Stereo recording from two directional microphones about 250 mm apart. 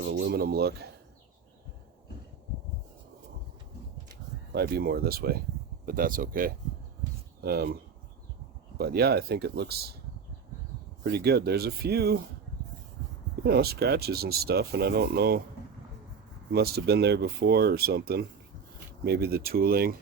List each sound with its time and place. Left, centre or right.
0.1 s speech: right
4.5 s speech: right
8.8 s speech: right
11.0 s speech: right
13.4 s speech: right
16.5 s speech: right